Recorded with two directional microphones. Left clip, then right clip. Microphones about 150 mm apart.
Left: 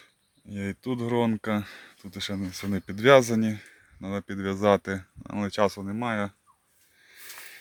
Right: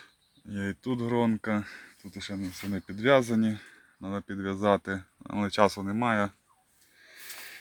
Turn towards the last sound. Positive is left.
turn(degrees=-5)  # may be behind; listen again after turning